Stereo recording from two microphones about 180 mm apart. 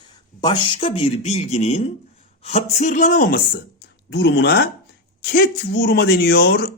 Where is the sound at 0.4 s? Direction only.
30° left (ahead or behind); by 3.6 s 55° left (ahead or behind).